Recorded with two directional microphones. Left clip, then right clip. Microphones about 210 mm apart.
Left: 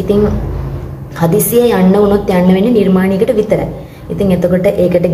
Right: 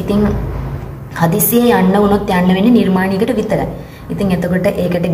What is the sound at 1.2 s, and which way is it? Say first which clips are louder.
A woman's voice: left 3 dB; 10° right (ahead or behind).